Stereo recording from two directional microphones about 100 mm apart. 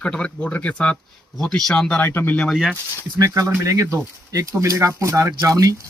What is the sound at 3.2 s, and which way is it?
Speech, 35° right (ahead or behind).